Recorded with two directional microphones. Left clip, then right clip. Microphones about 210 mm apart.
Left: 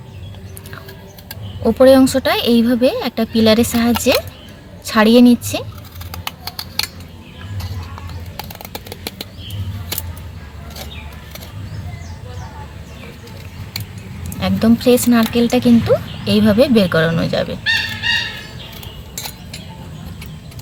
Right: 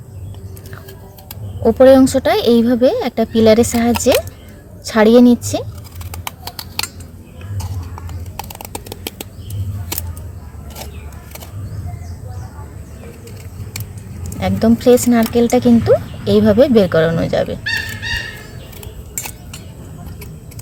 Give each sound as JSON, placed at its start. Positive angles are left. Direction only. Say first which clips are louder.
{"t": 1.6, "sound": "speech", "louder": "right 2 dB", "side_deg": -30}
{"t": 8.4, "sound": "a sound", "louder": "right 1 dB", "side_deg": -35}
{"t": 14.3, "sound": "speech", "louder": "right 1 dB", "side_deg": -30}